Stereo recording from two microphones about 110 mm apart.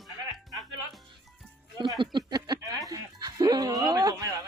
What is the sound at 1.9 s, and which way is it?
Speech, 40° right (ahead or behind).